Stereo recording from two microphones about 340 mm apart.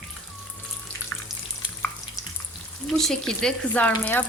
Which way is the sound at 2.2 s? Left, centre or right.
Centre.